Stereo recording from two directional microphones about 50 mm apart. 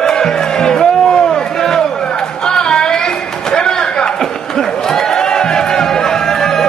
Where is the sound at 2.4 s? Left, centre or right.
Centre.